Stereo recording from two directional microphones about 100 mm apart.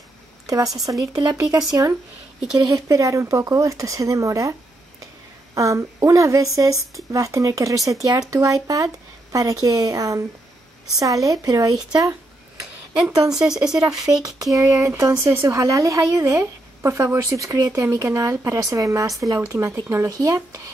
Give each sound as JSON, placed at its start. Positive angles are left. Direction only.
{"t": 0.8, "sound": "speech", "side_deg": -35}
{"t": 2.6, "sound": "speech", "side_deg": -35}
{"t": 13.0, "sound": "speech", "side_deg": -5}
{"t": 14.0, "sound": "speech", "side_deg": -35}